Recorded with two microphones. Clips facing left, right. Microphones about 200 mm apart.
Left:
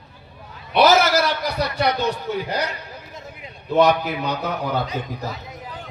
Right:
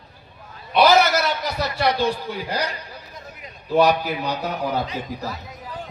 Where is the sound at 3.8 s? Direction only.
35° right (ahead or behind).